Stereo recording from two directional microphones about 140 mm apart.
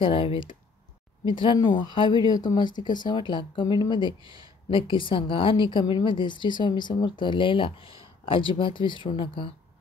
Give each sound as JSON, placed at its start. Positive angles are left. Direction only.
{"t": 0.0, "sound": "speech", "side_deg": 40}